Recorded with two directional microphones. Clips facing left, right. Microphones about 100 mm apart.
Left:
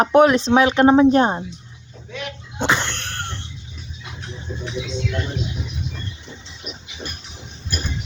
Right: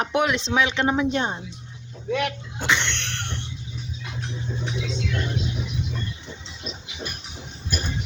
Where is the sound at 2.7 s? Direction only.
40° left (ahead or behind).